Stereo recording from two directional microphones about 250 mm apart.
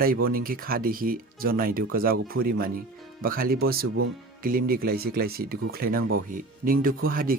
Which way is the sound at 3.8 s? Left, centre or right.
Right.